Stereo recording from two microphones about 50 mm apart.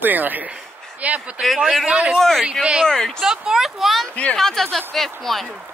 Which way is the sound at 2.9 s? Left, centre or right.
Centre.